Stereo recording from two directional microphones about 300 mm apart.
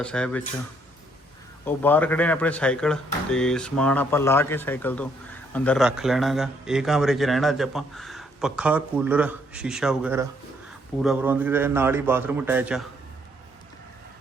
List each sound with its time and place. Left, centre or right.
0.0 s a man's voice: centre
1.6 s a man's voice: centre